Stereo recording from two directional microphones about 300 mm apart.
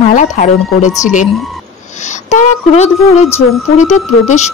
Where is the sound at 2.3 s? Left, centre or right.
Left.